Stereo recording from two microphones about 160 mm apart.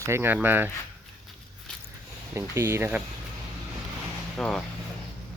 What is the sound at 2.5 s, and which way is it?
Speech, 15° right (ahead or behind).